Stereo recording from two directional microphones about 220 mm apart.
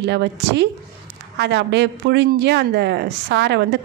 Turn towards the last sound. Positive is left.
turn(degrees=-50)  # may be behind; listen again after turning